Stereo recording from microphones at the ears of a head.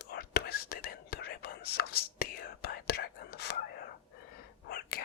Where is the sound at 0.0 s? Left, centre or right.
Left.